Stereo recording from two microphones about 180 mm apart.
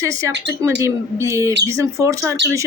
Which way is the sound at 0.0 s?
15° right (ahead or behind).